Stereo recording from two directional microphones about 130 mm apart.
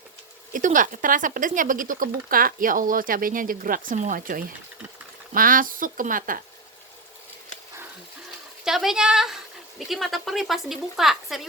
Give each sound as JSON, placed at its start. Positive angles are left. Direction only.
{"t": 0.5, "sound": "speech", "side_deg": -85}
{"t": 8.6, "sound": "a woman's voice", "side_deg": -5}